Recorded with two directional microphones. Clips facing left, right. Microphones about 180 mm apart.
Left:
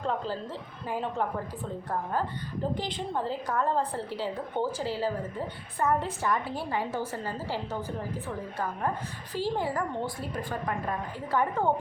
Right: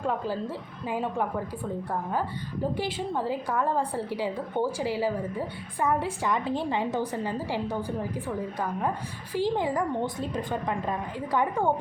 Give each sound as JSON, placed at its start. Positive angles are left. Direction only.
{"t": 0.0, "sound": "a woman's voice", "side_deg": -10}
{"t": 2.7, "sound": "a woman's voice", "side_deg": -10}
{"t": 9.3, "sound": "a woman's voice", "side_deg": -15}